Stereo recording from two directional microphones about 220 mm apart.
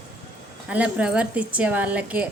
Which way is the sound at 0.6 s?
5° right (ahead or behind).